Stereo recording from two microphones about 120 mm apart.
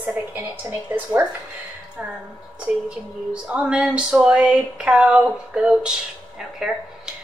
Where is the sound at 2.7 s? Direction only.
10° right (ahead or behind).